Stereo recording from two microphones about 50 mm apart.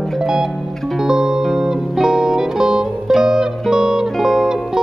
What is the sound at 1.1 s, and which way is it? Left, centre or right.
Music, centre.